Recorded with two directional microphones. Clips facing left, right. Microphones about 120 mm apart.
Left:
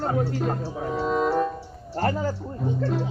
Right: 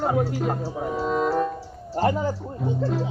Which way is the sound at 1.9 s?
15° right (ahead or behind).